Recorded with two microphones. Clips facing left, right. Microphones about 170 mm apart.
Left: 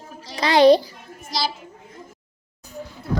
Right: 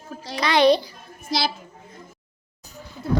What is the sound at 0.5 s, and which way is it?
Speech, 40° left (ahead or behind).